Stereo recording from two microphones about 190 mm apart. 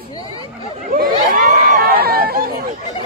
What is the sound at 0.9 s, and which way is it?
Chatter, 50° right (ahead or behind).